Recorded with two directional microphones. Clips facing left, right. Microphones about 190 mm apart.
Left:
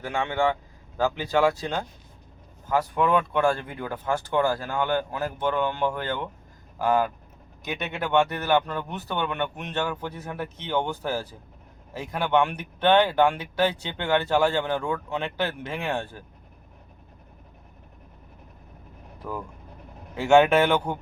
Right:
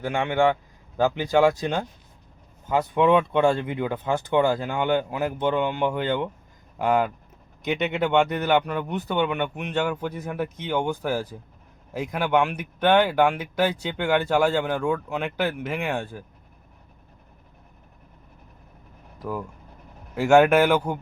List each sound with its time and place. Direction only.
0.0 s speech: 15° right (ahead or behind)
19.2 s speech: 5° right (ahead or behind)